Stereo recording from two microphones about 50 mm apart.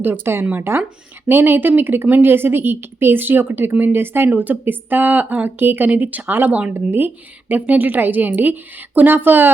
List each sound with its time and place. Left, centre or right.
0.0 s a woman's voice: right
5.9 s a woman's voice: right